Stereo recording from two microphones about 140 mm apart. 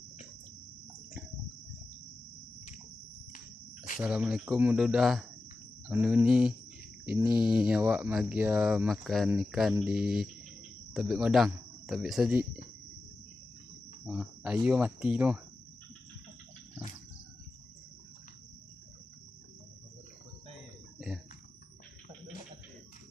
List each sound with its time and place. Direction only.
3.3 s a sound: 65° left (ahead or behind)
4.0 s speech: 10° right (ahead or behind)
14.0 s speech: 10° right (ahead or behind)